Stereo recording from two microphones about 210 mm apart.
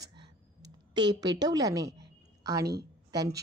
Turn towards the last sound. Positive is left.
turn(degrees=-15)  # may be behind; listen again after turning